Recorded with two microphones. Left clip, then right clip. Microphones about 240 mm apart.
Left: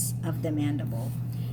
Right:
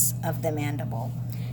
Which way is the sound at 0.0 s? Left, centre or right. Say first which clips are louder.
Right 5 dB; right.